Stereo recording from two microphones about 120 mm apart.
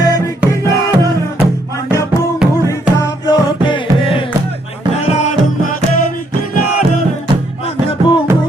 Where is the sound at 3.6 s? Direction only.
45° left (ahead or behind).